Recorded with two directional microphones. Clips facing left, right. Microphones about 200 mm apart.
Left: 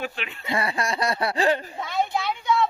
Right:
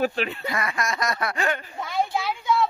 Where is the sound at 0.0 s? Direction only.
40° right (ahead or behind).